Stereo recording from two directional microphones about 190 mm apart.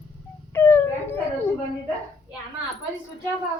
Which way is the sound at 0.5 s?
10° left (ahead or behind).